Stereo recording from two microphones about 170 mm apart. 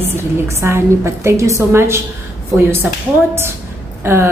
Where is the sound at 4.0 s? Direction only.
15° right (ahead or behind).